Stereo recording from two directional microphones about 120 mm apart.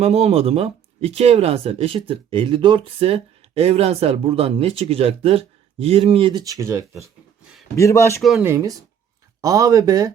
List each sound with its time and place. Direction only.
0.0 s speech: 60° right (ahead or behind)
6.4 s speech: 25° right (ahead or behind)
7.8 s a man's voice: 25° left (ahead or behind)
8.4 s speech: 20° right (ahead or behind)